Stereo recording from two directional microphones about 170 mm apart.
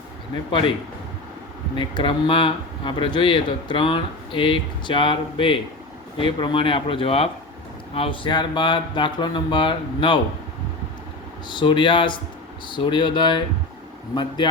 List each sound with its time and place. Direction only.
1.7 s speech: 30° left (ahead or behind)
11.4 s speech: 30° left (ahead or behind)